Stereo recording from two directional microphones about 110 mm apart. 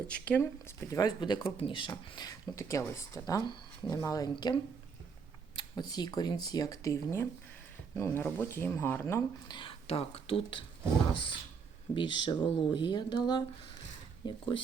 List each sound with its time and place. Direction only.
0.1 s speech: 10° left (ahead or behind)
0.9 s speech: 35° left (ahead or behind)
2.6 s speech: 25° left (ahead or behind)
5.5 s speech: 40° left (ahead or behind); by 9.2 s 25° left (ahead or behind)
9.5 s speech: 50° left (ahead or behind)